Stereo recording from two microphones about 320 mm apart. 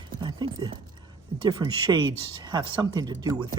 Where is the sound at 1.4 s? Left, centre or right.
Centre.